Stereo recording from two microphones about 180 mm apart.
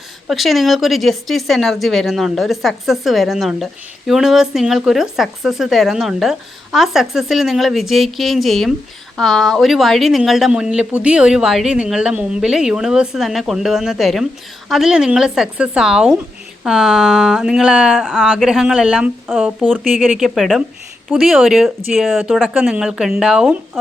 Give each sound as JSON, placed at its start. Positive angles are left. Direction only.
{"t": 0.3, "sound": "a woman's voice", "side_deg": 0}